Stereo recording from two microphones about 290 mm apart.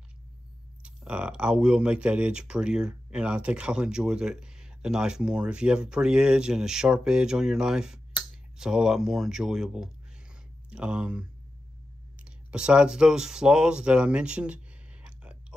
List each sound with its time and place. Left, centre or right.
0.8 s speech: centre